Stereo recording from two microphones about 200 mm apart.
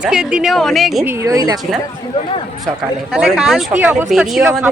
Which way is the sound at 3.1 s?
5° right (ahead or behind).